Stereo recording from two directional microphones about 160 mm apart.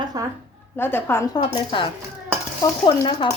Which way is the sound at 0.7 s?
15° left (ahead or behind).